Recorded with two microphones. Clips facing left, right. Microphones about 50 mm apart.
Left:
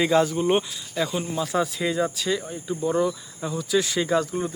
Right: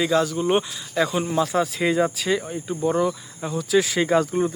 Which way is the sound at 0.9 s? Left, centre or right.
Right.